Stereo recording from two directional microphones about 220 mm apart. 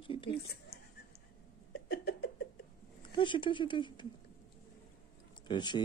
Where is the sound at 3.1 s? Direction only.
20° left (ahead or behind).